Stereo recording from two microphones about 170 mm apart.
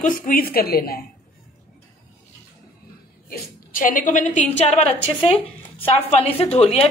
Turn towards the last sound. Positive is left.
turn(degrees=35)  # may be behind; listen again after turning